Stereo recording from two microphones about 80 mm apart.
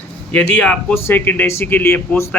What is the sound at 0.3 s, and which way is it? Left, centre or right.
Speech, centre.